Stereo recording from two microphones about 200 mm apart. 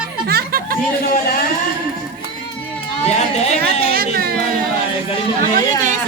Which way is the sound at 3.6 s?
50° right (ahead or behind).